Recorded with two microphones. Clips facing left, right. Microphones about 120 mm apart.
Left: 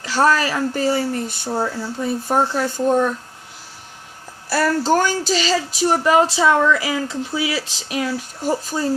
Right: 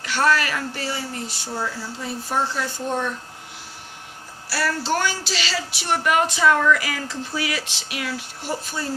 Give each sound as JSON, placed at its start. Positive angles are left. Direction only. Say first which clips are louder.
{"t": 0.0, "sound": "speech", "louder": "left 4 dB", "side_deg": 35}
{"t": 4.4, "sound": "speech", "louder": "left 7 dB", "side_deg": 50}
{"t": 6.0, "sound": "speech", "louder": "left 3 dB", "side_deg": 30}
{"t": 7.8, "sound": "speech", "louder": "left 6 dB", "side_deg": 35}